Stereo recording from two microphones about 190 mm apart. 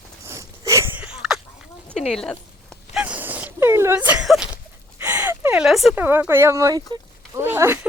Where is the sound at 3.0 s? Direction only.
5° right (ahead or behind).